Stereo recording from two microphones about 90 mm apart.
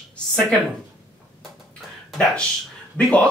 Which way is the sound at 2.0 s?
5° left (ahead or behind).